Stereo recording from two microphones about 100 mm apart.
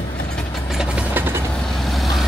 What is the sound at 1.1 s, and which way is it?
Vehicle, 20° right (ahead or behind).